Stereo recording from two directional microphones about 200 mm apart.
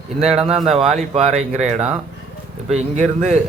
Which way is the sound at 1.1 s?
35° right (ahead or behind).